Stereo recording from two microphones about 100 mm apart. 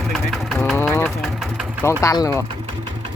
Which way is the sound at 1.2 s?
5° right (ahead or behind).